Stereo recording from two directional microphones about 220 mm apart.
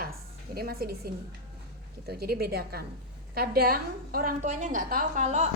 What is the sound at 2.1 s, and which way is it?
A woman's voice, 45° right (ahead or behind).